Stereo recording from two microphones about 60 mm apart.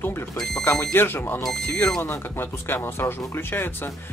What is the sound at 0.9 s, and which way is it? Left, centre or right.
Speech, left.